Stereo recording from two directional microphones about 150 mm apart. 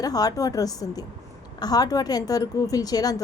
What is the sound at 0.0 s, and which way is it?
A woman's voice, 25° left (ahead or behind).